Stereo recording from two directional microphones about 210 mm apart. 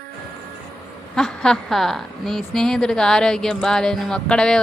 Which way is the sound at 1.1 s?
5° left (ahead or behind).